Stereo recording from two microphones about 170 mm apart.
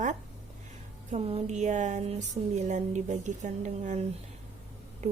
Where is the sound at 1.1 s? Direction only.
35° right (ahead or behind).